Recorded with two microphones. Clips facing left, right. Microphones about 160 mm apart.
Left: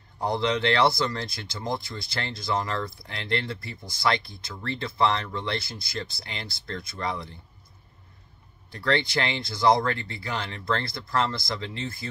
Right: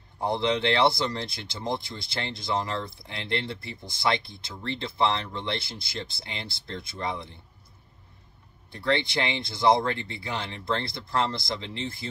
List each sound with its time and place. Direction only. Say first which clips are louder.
0.2 s speech: even; 25° right (ahead or behind)
8.7 s speech: left 1 dB; 20° right (ahead or behind)